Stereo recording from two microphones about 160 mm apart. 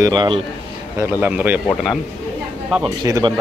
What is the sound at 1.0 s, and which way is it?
Speech, 10° right (ahead or behind).